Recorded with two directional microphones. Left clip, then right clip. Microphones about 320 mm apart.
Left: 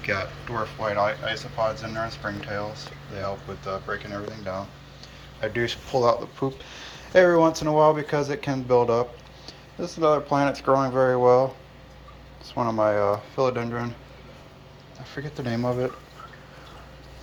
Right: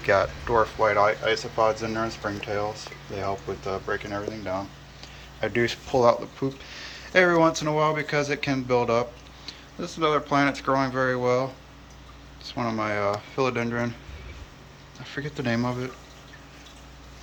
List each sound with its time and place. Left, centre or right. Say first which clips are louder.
0.0 s speech: right 6 dB; centre
5.4 s speech: right 1 dB; centre
12.5 s speech: left 5 dB; centre
15.0 s speech: right 3 dB; centre